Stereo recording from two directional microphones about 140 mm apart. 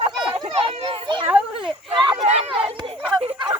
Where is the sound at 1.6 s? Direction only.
35° right (ahead or behind).